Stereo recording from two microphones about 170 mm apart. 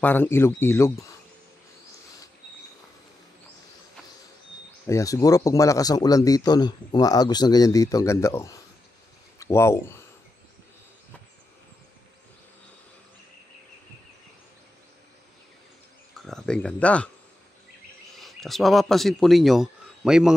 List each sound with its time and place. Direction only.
0.0 s speech: 10° left (ahead or behind)
4.8 s speech: 20° left (ahead or behind)
16.3 s speech: 5° left (ahead or behind)
18.2 s speech: centre (ahead or behind)